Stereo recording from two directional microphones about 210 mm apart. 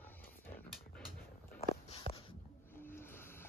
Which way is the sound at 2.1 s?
25° left (ahead or behind).